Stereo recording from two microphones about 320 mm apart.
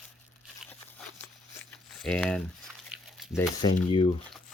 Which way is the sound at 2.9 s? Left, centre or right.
Centre.